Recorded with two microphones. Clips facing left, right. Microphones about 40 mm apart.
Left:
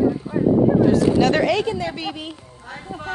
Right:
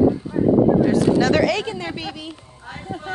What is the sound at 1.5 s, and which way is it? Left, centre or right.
Speech, right.